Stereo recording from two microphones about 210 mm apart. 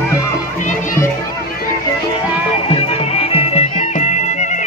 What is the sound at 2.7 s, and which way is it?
Music, 30° left (ahead or behind).